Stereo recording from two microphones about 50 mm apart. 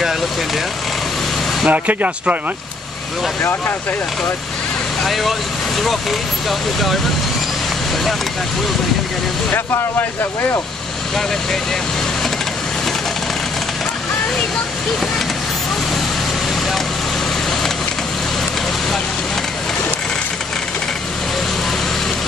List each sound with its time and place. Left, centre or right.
1.7 s speech: right
5.0 s speech: centre